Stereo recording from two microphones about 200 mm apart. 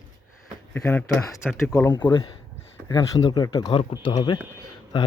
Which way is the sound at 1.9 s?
25° left (ahead or behind).